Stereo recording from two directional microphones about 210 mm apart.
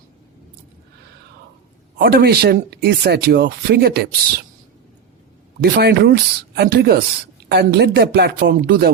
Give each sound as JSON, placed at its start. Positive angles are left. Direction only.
{"t": 2.0, "sound": "speech", "side_deg": -45}
{"t": 5.5, "sound": "speech", "side_deg": -50}